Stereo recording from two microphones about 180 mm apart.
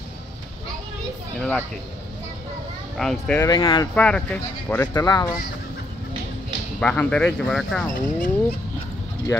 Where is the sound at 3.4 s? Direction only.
25° left (ahead or behind).